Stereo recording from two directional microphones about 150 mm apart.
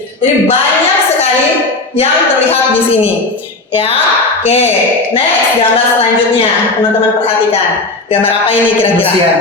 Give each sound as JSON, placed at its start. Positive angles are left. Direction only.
{"t": 4.4, "sound": "speech", "side_deg": 45}